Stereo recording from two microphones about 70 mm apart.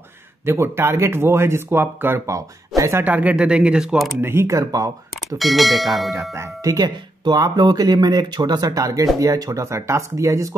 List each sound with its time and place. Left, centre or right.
0.5 s speech: right
2.2 s speech: right
3.0 s speech: right
3.3 s speech: centre
4.2 s speech: right
4.5 s speech: right
5.4 s speech: centre
6.6 s speech: right